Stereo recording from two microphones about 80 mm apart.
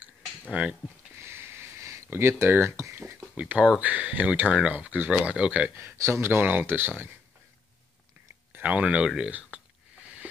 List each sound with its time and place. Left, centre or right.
0.5 s speech: centre
1.1 s a sound: right
2.0 s speech: right
3.3 s speech: centre
5.8 s speech: right
8.5 s speech: centre